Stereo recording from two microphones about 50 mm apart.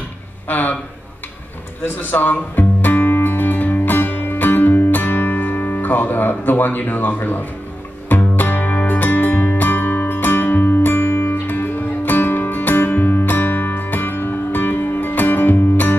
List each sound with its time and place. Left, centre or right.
0.5 s speech: left
2.0 s music: left